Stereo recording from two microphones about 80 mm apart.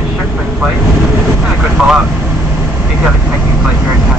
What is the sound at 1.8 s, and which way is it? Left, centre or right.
Vehicle, centre.